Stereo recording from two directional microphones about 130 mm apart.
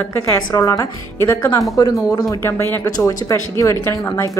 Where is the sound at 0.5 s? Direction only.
25° left (ahead or behind).